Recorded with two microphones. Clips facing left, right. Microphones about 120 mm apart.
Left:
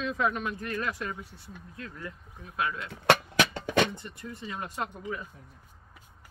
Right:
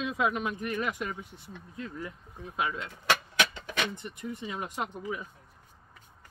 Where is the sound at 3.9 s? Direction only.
15° right (ahead or behind).